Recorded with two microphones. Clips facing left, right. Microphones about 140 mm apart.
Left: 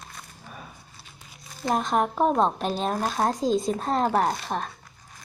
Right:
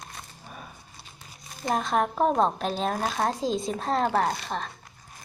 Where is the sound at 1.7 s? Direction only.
Centre (ahead or behind).